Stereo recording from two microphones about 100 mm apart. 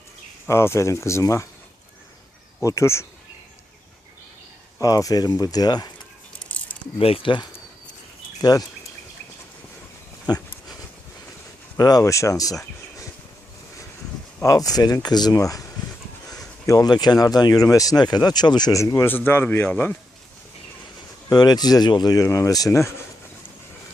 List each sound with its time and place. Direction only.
0.4 s speech: 25° left (ahead or behind)
2.6 s speech: 30° left (ahead or behind)
4.8 s speech: 35° left (ahead or behind)
6.4 s a sound: 15° left (ahead or behind)
7.0 s speech: 70° left (ahead or behind)
8.4 s speech: 35° left (ahead or behind)
10.3 s speech: 45° left (ahead or behind)
11.8 s speech: 40° left (ahead or behind)
14.4 s speech: 35° left (ahead or behind)
16.6 s speech: 40° left (ahead or behind)
19.0 s speech: 20° left (ahead or behind)
21.2 s speech: 40° left (ahead or behind)